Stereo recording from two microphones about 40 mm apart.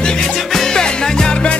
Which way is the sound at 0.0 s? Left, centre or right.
Centre.